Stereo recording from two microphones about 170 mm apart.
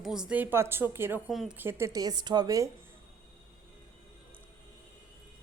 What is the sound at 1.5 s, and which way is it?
A woman's voice, 15° right (ahead or behind).